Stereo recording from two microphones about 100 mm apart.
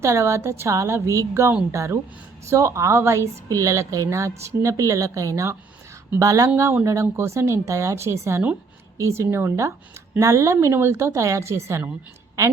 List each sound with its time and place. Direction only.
0.0 s a woman's voice: 30° right (ahead or behind)